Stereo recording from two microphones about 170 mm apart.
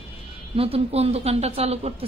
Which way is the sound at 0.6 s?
35° right (ahead or behind).